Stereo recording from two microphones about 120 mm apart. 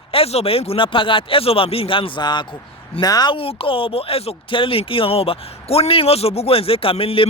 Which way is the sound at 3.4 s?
50° left (ahead or behind).